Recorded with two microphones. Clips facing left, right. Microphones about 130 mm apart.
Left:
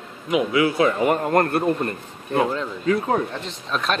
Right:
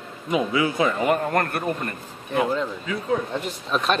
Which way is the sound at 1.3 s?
30° left (ahead or behind).